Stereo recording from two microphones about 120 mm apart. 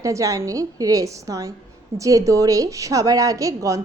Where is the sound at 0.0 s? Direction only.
30° right (ahead or behind).